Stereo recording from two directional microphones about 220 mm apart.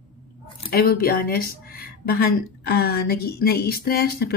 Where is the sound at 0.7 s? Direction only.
45° left (ahead or behind).